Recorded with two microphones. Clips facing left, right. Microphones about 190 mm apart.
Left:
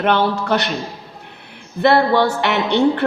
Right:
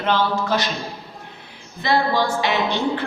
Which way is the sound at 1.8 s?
65° left (ahead or behind).